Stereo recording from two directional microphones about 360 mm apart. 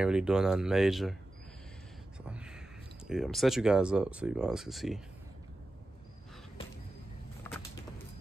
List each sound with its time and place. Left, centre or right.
0.0 s speech: centre
2.2 s speech: centre
7.4 s vehicle: centre